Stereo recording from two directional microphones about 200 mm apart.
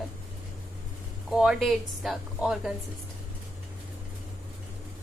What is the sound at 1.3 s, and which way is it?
Speech, centre (ahead or behind).